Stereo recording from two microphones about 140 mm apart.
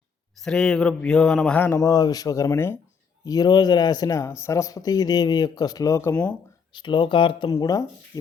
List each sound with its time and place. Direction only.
0.3 s speech: 5° left (ahead or behind); by 6.1 s 20° left (ahead or behind)
6.7 s speech: 35° left (ahead or behind)